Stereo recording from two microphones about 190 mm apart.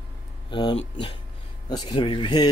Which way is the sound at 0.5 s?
25° left (ahead or behind).